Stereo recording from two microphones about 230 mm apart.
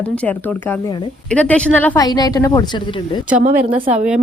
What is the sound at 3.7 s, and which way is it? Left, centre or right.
Speech, right.